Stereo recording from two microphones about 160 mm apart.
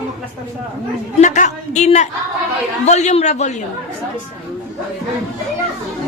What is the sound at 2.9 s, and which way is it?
Speech, 45° left (ahead or behind).